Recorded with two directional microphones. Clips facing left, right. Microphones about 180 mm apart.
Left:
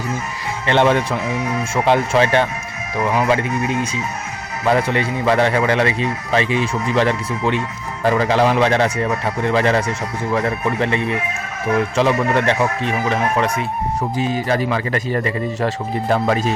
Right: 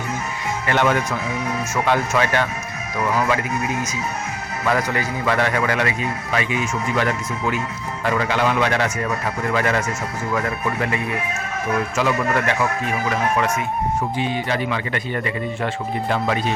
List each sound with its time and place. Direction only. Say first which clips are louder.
0.7 s a man's voice: left 4 dB; 30° left (ahead or behind)